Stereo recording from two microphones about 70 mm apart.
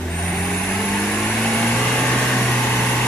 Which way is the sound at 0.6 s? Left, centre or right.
Centre.